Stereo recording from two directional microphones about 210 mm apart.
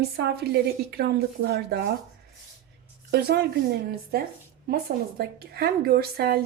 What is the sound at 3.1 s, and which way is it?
A woman's voice, 50° right (ahead or behind).